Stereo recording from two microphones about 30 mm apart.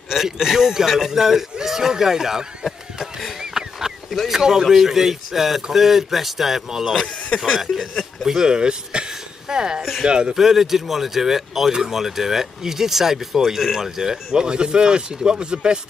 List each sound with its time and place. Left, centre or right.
0.1 s speech: centre
3.5 s a sound: centre
4.3 s speech: centre
8.3 s speech: right
10.3 s speech: centre
14.4 s speech: right